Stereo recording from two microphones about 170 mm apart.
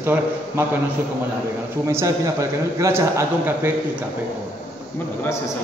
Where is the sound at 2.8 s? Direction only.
15° right (ahead or behind).